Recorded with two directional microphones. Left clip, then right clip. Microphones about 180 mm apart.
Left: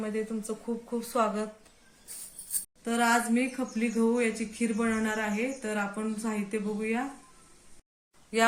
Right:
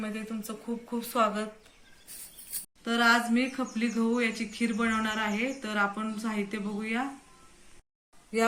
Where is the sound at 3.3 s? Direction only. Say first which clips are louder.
Even; 40° left (ahead or behind).